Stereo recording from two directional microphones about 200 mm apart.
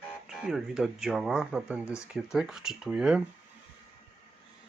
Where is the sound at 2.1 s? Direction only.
Centre (ahead or behind).